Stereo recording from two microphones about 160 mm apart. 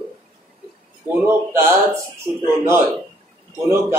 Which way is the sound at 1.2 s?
15° right (ahead or behind).